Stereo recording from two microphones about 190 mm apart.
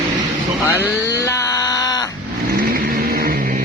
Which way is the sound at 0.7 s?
15° left (ahead or behind).